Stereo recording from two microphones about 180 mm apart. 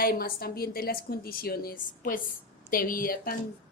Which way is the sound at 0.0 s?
55° left (ahead or behind).